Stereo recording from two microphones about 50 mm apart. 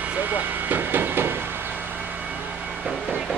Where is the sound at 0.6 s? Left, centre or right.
Right.